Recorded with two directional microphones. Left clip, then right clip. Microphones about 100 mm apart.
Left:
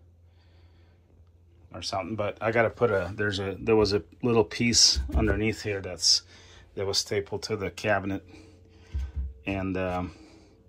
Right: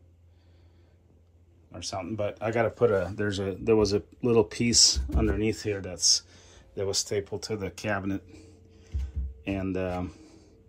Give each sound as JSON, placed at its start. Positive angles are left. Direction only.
{"t": 1.7, "sound": "speech", "side_deg": -25}
{"t": 5.1, "sound": "speech", "side_deg": -15}
{"t": 5.5, "sound": "speech", "side_deg": -30}
{"t": 9.4, "sound": "speech", "side_deg": -20}
{"t": 10.0, "sound": "a sound", "side_deg": -30}